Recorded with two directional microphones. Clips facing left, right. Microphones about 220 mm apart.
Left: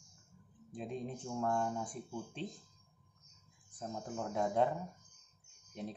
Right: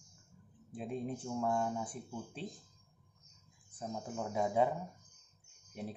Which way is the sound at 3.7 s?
5° right (ahead or behind).